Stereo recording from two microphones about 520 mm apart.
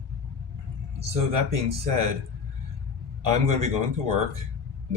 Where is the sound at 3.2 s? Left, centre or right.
Right.